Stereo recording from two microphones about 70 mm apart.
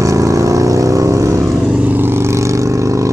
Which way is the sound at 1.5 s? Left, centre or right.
Centre.